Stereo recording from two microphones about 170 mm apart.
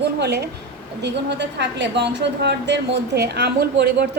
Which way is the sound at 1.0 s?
90° right.